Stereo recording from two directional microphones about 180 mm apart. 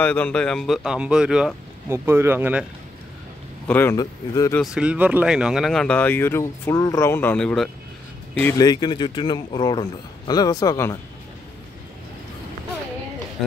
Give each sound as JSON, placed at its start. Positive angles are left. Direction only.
{"t": 0.0, "sound": "speech", "side_deg": 10}
{"t": 3.6, "sound": "speech", "side_deg": 10}
{"t": 4.6, "sound": "speech", "side_deg": -5}
{"t": 8.5, "sound": "a man's voice", "side_deg": 25}
{"t": 13.4, "sound": "speech", "side_deg": 0}